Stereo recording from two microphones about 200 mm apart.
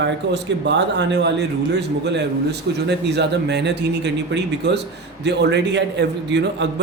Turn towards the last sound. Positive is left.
turn(degrees=-60)  # may be behind; listen again after turning